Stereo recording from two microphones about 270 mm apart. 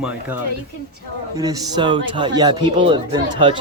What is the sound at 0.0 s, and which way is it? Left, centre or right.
Speech, centre.